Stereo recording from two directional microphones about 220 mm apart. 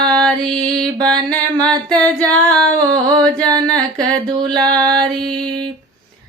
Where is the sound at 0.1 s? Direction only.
5° left (ahead or behind).